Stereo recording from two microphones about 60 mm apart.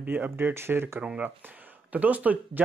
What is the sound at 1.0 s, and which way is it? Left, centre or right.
Speech, centre.